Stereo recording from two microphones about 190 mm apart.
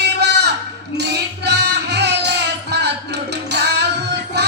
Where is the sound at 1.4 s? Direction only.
65° right (ahead or behind).